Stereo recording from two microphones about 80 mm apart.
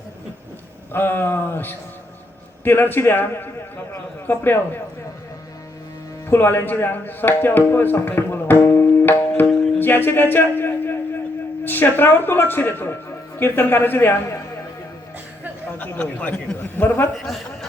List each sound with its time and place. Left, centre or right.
0.9 s speech: left
6.2 s speech: left
9.7 s music: left
11.6 s speech: left
15.8 s speech: centre
17.2 s a man's voice: centre